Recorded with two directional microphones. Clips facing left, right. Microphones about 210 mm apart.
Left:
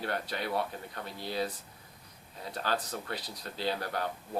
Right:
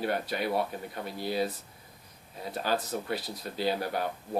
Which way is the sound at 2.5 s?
10° right (ahead or behind).